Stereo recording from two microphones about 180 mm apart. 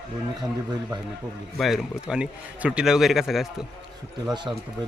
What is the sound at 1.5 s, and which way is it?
A man's voice, centre (ahead or behind).